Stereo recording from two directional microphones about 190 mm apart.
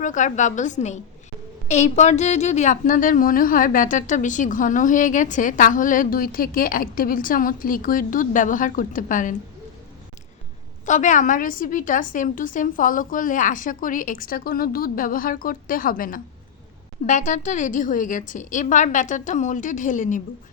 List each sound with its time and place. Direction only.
0.0 s a woman's voice: 40° left (ahead or behind)
10.8 s a woman's voice: 40° left (ahead or behind)